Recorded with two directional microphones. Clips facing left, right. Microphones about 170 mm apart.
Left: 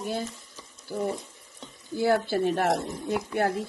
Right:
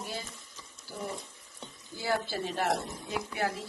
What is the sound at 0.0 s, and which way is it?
Speech, 50° left (ahead or behind).